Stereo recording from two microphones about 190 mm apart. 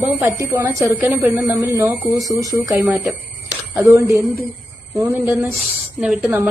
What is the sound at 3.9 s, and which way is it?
A woman's voice, 15° right (ahead or behind).